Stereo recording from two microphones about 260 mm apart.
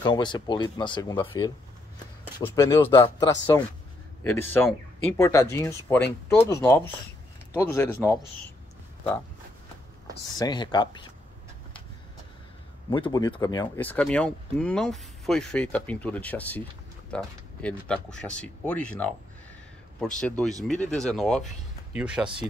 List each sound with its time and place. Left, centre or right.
0.0 s speech: centre
2.5 s speech: centre
10.3 s speech: centre
12.9 s speech: centre
20.2 s speech: centre